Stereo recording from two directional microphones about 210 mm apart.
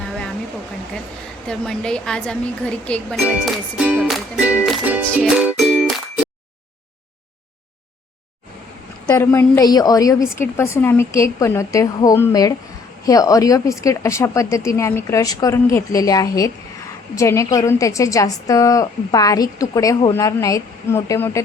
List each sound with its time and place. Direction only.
1.5 s speech: 5° left (ahead or behind)
5.0 s music: centre (ahead or behind)
9.0 s a woman's voice: 10° left (ahead or behind)